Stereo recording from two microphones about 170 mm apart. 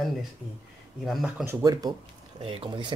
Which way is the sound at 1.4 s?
20° right (ahead or behind).